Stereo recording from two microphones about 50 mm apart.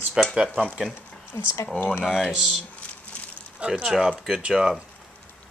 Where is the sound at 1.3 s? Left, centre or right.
Left.